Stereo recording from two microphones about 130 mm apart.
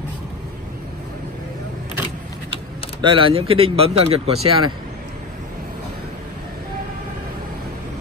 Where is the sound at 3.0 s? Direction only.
40° right (ahead or behind).